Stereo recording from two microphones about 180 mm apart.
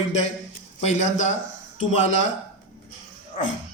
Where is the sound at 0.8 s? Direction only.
40° left (ahead or behind).